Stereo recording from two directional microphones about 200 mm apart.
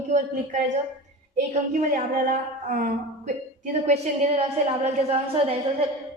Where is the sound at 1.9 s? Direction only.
40° right (ahead or behind).